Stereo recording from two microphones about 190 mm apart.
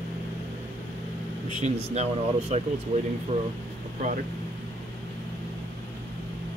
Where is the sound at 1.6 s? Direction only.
35° right (ahead or behind).